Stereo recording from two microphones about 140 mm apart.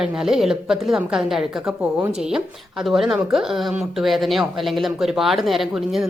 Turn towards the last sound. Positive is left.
turn(degrees=0)  # may be behind; listen again after turning